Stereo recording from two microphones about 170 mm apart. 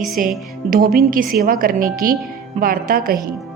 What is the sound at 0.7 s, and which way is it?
A woman's voice, 60° right (ahead or behind).